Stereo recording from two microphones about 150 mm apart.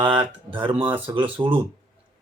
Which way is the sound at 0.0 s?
35° right (ahead or behind).